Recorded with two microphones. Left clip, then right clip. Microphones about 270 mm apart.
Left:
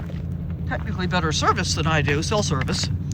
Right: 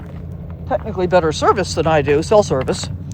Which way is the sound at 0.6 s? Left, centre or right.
Centre.